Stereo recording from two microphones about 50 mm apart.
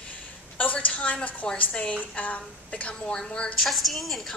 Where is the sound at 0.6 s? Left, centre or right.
Left.